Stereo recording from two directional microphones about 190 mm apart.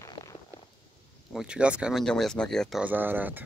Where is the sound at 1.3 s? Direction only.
5° right (ahead or behind).